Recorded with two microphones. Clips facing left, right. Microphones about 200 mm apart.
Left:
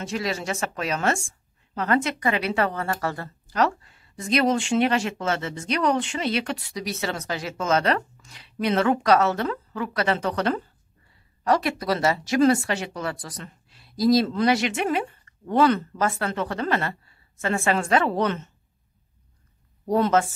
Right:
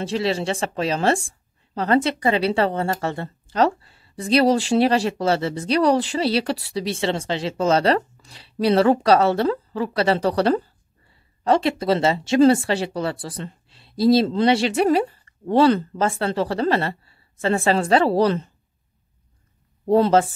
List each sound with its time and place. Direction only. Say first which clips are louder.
0.0 s speech: right 6 dB; 30° right (ahead or behind)
19.9 s speech: right 5 dB; 30° right (ahead or behind)